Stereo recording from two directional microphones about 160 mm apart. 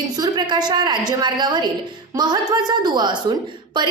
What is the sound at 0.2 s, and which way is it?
A woman's voice, 25° right (ahead or behind).